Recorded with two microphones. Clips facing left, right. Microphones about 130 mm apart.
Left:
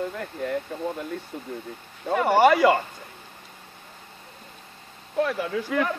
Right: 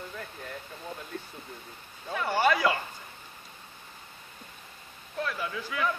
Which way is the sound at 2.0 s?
70° left (ahead or behind).